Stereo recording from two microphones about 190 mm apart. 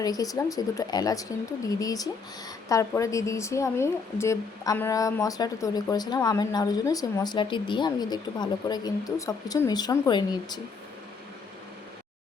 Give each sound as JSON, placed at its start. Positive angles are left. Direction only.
{"t": 0.0, "sound": "a woman's voice", "side_deg": 20}